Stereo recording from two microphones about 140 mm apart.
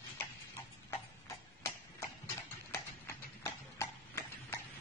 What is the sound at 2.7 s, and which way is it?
Clip-clop, 20° left (ahead or behind).